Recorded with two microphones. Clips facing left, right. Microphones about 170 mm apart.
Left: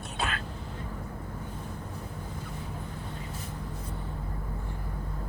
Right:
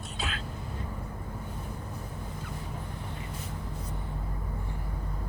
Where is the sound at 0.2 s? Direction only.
55° left (ahead or behind).